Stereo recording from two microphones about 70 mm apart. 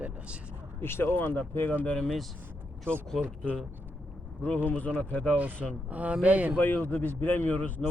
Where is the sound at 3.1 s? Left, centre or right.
Centre.